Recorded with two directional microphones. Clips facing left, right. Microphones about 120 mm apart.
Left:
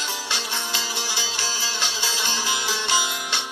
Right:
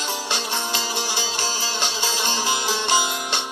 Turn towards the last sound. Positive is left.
turn(degrees=-45)  # may be behind; listen again after turning